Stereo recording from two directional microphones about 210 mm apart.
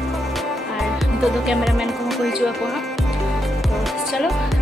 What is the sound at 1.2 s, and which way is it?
Speech, centre (ahead or behind).